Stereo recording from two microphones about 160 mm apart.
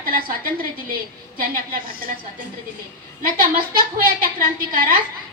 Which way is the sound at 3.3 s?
60° right (ahead or behind).